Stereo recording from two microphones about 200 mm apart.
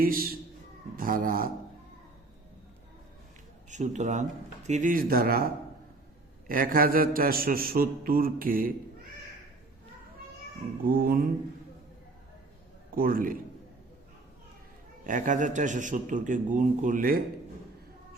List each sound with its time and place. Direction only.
0.0 s a man's voice: 45° right (ahead or behind)
3.7 s a man's voice: 35° right (ahead or behind)
6.5 s a man's voice: 45° right (ahead or behind)
10.8 s a man's voice: 45° right (ahead or behind)
13.0 s a man's voice: 45° right (ahead or behind)
15.0 s a man's voice: 40° right (ahead or behind)